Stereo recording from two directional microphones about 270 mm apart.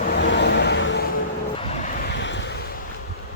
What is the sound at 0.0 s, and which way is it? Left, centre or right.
Vehicle, left.